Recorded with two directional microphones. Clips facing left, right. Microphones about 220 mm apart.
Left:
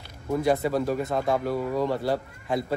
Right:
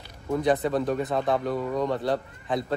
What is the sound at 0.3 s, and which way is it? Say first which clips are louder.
Speech: even; centre (ahead or behind).